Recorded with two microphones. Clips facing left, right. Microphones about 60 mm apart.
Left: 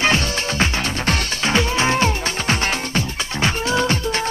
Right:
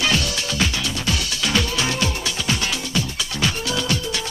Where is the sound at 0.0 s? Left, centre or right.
Left.